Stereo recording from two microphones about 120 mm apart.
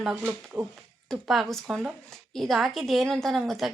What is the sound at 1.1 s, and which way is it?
Speech, centre (ahead or behind).